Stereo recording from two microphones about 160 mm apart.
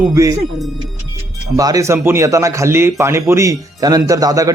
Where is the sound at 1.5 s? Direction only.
20° right (ahead or behind).